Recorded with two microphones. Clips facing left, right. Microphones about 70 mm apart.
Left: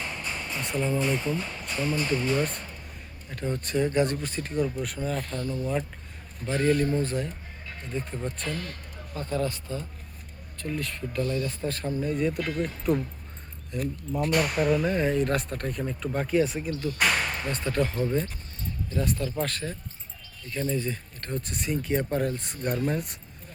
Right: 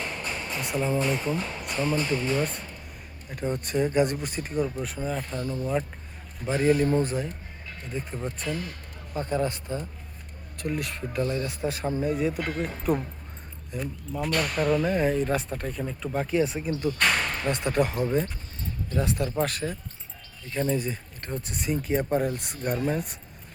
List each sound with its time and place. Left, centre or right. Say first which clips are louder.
0.6 s speech: right 1 dB; centre
2.0 s speech: even; centre
9.1 s speech: right 2 dB; right
11.4 s speech: right 2 dB; centre
14.3 s speech: left 2 dB; centre
14.5 s speech: even; centre
16.5 s speech: right 2 dB; centre